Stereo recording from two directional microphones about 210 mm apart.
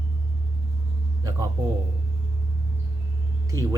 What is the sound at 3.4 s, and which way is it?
Speech, 15° right (ahead or behind).